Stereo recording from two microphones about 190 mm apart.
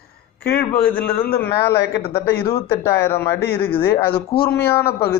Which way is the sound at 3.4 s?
55° left (ahead or behind).